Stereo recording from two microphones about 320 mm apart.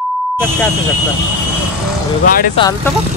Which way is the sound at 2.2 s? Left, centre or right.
Left.